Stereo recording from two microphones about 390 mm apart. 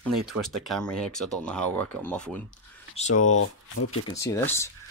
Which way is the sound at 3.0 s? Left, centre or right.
Centre.